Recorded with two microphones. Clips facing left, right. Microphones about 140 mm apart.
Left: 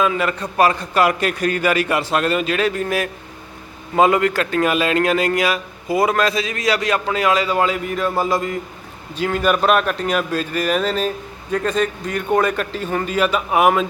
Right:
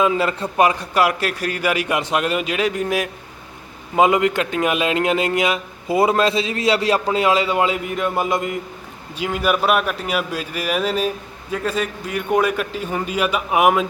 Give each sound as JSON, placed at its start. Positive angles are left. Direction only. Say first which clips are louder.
{"t": 0.0, "sound": "a man's voice", "louder": "right 1 dB", "side_deg": -25}
{"t": 0.5, "sound": "a man's voice", "louder": "left 1 dB", "side_deg": -15}